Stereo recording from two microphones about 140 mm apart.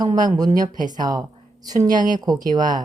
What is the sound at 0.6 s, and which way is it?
Speech, 70° right (ahead or behind).